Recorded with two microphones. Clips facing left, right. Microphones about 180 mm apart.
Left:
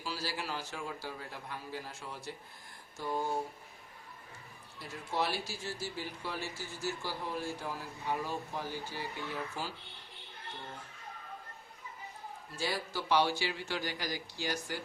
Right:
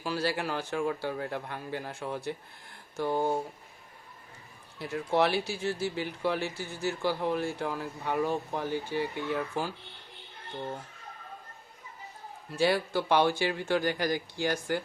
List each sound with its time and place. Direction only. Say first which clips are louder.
0.0 s speech: right 8 dB; 55° right (ahead or behind)
4.8 s speech: right 9 dB; 65° right (ahead or behind)
12.5 s speech: right 10 dB; 65° right (ahead or behind)